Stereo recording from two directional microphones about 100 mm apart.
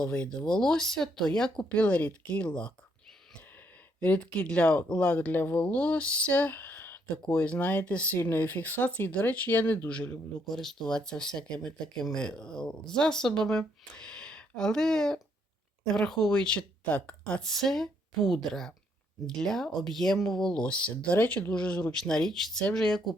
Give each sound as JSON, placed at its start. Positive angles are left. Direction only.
{"t": 0.0, "sound": "speech", "side_deg": 10}
{"t": 4.0, "sound": "speech", "side_deg": 15}
{"t": 10.5, "sound": "a woman's voice", "side_deg": 5}